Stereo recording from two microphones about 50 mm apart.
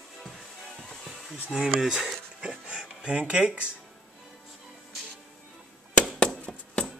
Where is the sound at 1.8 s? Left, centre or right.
Centre.